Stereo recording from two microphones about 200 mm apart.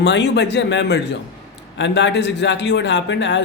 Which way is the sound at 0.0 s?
60° left (ahead or behind).